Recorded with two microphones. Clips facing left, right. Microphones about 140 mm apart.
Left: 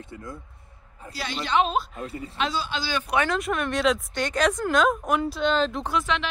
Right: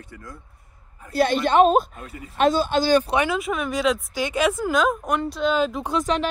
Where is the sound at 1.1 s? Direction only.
50° right (ahead or behind).